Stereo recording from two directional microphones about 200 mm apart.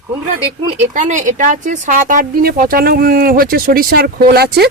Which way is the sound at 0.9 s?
40° right (ahead or behind).